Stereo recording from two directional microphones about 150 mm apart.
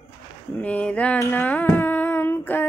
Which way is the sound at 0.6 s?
10° left (ahead or behind).